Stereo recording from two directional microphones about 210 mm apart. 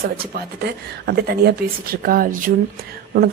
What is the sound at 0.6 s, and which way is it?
Speech, 50° right (ahead or behind).